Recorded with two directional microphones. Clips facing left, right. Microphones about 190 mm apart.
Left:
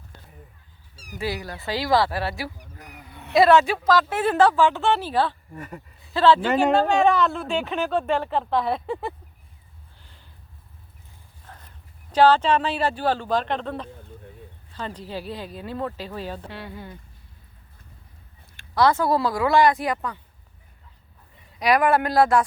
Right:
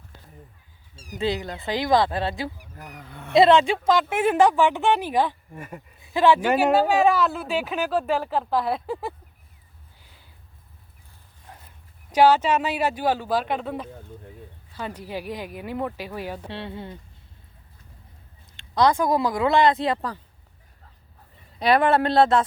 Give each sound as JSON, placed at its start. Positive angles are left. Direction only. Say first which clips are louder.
{"t": 0.9, "sound": "speech", "louder": "right 3 dB", "side_deg": -20}
{"t": 2.7, "sound": "a sound", "louder": "right 3 dB", "side_deg": -50}
{"t": 3.3, "sound": "speech", "louder": "even", "side_deg": -20}
{"t": 4.1, "sound": "speech", "louder": "even", "side_deg": -10}
{"t": 10.0, "sound": "a sound", "louder": "even", "side_deg": -10}
{"t": 11.4, "sound": "dog", "louder": "even", "side_deg": -10}
{"t": 12.1, "sound": "speech", "louder": "even", "side_deg": -10}
{"t": 16.5, "sound": "speech", "louder": "right 3 dB", "side_deg": -25}
{"t": 18.5, "sound": "speech", "louder": "even", "side_deg": -20}
{"t": 21.6, "sound": "speech", "louder": "right 1 dB", "side_deg": -30}